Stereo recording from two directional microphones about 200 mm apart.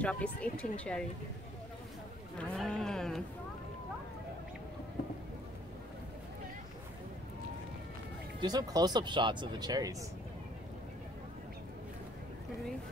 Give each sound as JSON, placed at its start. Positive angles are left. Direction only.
{"t": 0.0, "sound": "speech", "side_deg": 5}
{"t": 2.3, "sound": "a sound", "side_deg": 5}
{"t": 8.4, "sound": "speech", "side_deg": -20}